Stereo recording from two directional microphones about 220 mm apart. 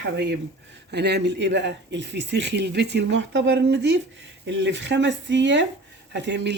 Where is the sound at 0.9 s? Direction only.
50° right (ahead or behind).